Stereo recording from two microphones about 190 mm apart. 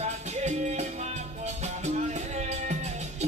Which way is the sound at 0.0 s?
35° right (ahead or behind).